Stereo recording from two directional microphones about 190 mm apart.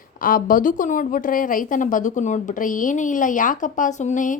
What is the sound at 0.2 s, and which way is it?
A woman's voice, 45° left (ahead or behind).